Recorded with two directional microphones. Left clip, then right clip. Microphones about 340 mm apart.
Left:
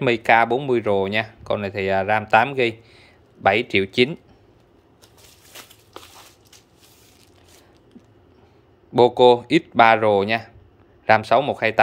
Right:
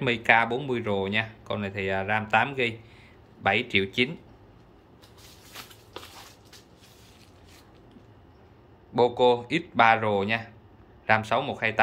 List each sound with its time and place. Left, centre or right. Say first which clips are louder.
0.0 s speech: left 5 dB; centre
8.9 s speech: left 8 dB; left